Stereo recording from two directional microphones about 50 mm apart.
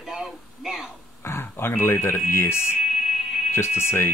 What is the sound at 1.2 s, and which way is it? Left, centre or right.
Speech, left.